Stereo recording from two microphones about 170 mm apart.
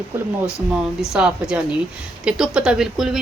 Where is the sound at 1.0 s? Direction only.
5° right (ahead or behind).